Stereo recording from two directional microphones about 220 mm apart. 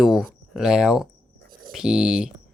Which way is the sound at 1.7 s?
5° right (ahead or behind).